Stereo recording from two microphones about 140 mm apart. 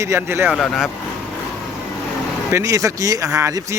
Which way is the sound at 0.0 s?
20° right (ahead or behind).